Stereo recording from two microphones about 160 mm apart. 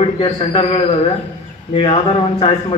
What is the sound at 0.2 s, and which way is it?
Speech, 35° left (ahead or behind).